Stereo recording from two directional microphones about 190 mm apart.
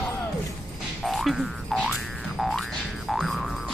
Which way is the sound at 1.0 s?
Centre (ahead or behind).